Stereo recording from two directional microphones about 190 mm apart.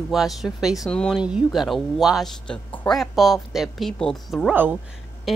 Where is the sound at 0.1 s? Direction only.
Centre (ahead or behind).